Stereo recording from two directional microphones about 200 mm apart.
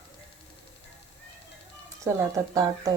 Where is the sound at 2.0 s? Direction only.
15° right (ahead or behind).